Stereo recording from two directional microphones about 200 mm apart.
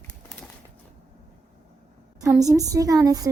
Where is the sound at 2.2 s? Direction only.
15° right (ahead or behind).